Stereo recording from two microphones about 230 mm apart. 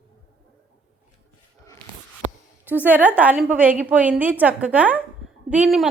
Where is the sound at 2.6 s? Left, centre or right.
Centre.